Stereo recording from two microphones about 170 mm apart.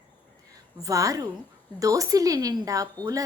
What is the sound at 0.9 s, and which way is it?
A woman's voice, 20° right (ahead or behind).